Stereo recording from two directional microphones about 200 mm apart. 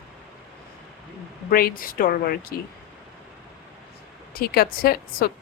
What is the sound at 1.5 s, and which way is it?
A woman's voice, 45° left (ahead or behind).